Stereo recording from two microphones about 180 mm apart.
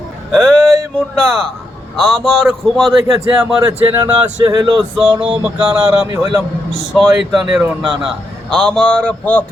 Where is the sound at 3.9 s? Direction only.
20° right (ahead or behind).